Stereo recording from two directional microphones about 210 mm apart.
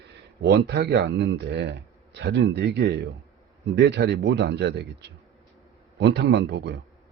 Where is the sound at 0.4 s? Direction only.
55° right (ahead or behind).